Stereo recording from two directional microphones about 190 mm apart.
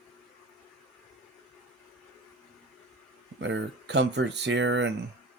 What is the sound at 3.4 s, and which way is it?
Speech, 75° right (ahead or behind).